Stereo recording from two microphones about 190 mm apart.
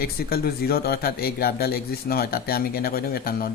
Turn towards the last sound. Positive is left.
turn(degrees=50)  # may be behind; listen again after turning